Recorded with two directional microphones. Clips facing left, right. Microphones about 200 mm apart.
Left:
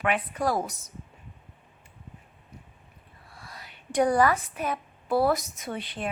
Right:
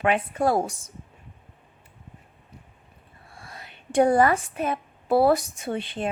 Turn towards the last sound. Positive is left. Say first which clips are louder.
# right 5 dB
turn(degrees=-25)  # may be behind; listen again after turning